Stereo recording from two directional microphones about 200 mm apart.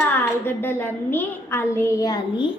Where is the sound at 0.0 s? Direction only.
10° left (ahead or behind).